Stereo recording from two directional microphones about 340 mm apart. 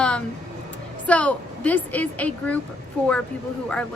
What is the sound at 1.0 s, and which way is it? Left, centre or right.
A woman's voice, centre.